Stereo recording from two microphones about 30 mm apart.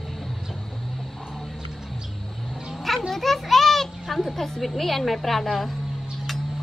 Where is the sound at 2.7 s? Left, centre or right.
Centre.